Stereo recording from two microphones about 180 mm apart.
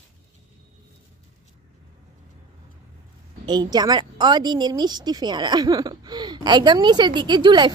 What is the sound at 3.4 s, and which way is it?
A woman's voice, 25° right (ahead or behind).